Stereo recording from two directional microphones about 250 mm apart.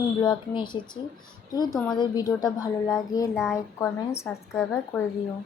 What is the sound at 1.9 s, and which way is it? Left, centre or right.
Speech, centre.